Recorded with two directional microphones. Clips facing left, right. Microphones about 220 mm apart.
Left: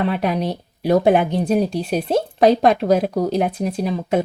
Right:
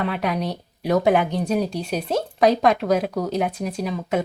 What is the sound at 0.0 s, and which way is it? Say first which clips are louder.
Speech: left 4 dB; 30° left (ahead or behind).